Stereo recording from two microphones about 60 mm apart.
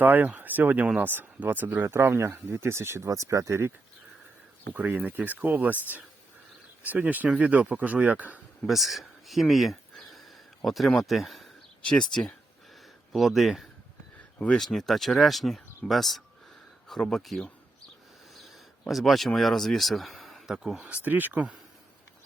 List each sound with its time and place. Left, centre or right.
0.0 s speech: right
3.1 s speech: right
4.7 s speech: right
6.8 s speech: right
8.6 s speech: centre
11.9 s speech: centre
13.1 s speech: centre
14.3 s speech: left
14.6 s speech: centre
20.9 s speech: right